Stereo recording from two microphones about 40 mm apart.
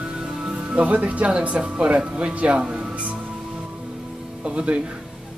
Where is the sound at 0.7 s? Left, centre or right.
Right.